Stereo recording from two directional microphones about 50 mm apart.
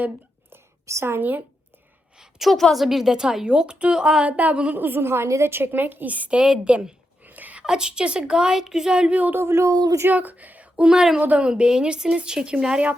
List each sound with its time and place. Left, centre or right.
0.9 s a woman's voice: right
1.2 s a woman's voice: right
2.1 s a sound: centre
2.7 s a woman's voice: centre
4.3 s speech: right
4.7 s a woman's voice: right
5.0 s a woman's voice: right
5.5 s a woman's voice: right
7.2 s a sound: right
7.6 s a woman's voice: centre
9.5 s speech: right
10.1 s speech: right
10.8 s a woman's voice: centre
11.2 s speech: right